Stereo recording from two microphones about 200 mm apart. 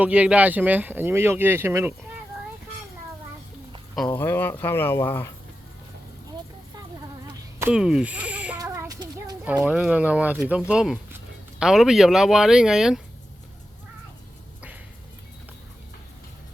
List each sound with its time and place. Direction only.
0.0 s speech: 5° right (ahead or behind)
4.2 s speech: 10° left (ahead or behind)
7.7 s speech: 5° right (ahead or behind)
8.5 s child singing: 15° right (ahead or behind)
9.4 s speech: 5° right (ahead or behind)